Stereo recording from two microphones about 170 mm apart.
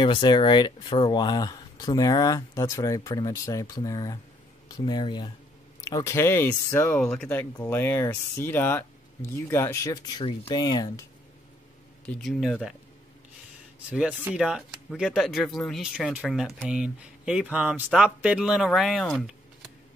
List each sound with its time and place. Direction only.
0.0 s speech: 25° left (ahead or behind)
12.1 s speech: centre (ahead or behind)
13.8 s speech: 10° right (ahead or behind)